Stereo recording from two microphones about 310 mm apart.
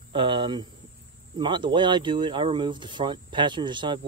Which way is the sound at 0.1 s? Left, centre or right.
Centre.